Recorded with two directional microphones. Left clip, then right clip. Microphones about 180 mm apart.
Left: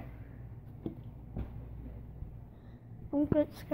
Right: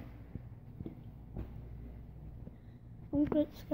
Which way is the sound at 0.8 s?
30° left (ahead or behind).